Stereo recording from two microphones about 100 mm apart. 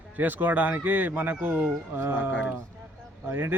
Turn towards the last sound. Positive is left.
turn(degrees=-20)  # may be behind; listen again after turning